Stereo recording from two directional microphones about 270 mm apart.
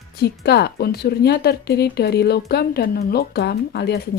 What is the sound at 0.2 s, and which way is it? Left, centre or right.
Speech, left.